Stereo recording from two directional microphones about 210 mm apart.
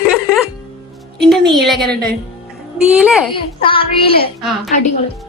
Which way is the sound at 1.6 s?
Centre (ahead or behind).